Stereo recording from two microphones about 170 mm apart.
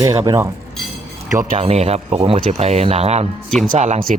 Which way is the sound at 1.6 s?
35° right (ahead or behind).